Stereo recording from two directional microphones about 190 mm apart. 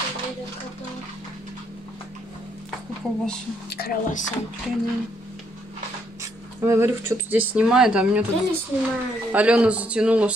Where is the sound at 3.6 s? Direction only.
55° left (ahead or behind).